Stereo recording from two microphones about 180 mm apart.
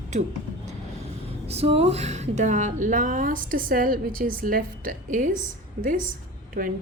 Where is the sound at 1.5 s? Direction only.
35° right (ahead or behind).